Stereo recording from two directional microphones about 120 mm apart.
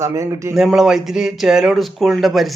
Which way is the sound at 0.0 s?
25° right (ahead or behind).